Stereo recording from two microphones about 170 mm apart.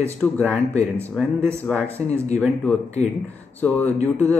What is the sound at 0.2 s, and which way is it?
Speech, 5° left (ahead or behind).